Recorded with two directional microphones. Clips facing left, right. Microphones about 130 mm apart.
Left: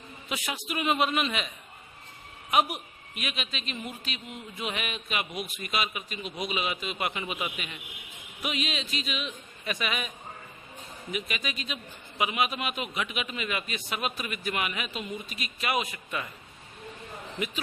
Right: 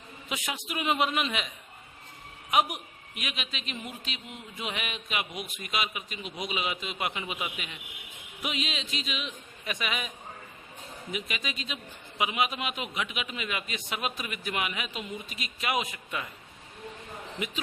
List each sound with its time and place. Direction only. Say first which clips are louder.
0.3 s a man's voice: left 1 dB; 20° right (ahead or behind)
2.5 s a man's voice: left 1 dB; 15° right (ahead or behind)
11.1 s a man's voice: left 2 dB; 20° right (ahead or behind)